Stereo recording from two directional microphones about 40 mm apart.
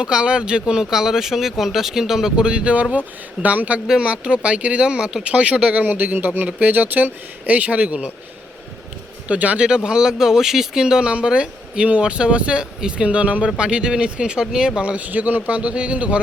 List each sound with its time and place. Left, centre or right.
0.0 s speech: right
2.3 s speech: right
3.4 s speech: right
3.8 s speech: right
5.3 s speech: right
5.7 s speech: right
9.2 s speech: right
9.6 s speech: right
15.0 s speech: right
15.4 s speech: right